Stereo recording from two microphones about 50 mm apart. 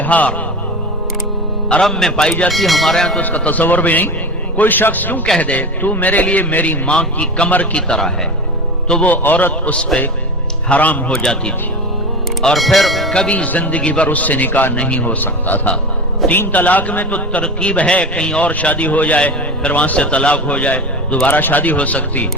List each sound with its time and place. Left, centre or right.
0.0 s music: left
1.8 s a man's voice: centre
2.2 s a man's voice: centre
2.5 s a man's voice: centre
3.2 s a man's voice: left
6.9 s a man's voice: left
7.8 s a man's voice: centre
9.0 s a man's voice: left
11.1 s a man's voice: centre
12.5 s speech: centre
13.3 s a man's voice: left
14.8 s a man's voice: left
15.0 s a man's voice: left; by 18.4 s centre
18.4 s a man's voice: left